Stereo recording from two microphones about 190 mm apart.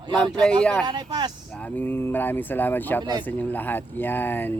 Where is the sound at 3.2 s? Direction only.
10° left (ahead or behind).